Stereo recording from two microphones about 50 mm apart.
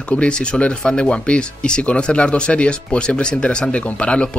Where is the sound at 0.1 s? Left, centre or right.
Left.